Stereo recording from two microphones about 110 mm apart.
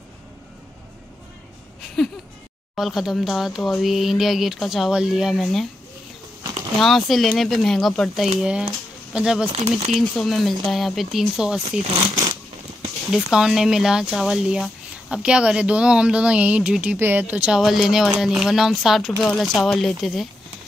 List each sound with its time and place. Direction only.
2.0 s speech: centre (ahead or behind)
6.8 s speech: centre (ahead or behind)
9.5 s speech: 65° right (ahead or behind)
9.9 s speech: centre (ahead or behind)
13.1 s speech: 5° right (ahead or behind)
17.6 s speech: centre (ahead or behind)